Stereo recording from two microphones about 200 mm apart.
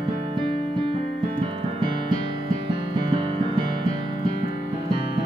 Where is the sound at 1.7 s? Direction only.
25° right (ahead or behind).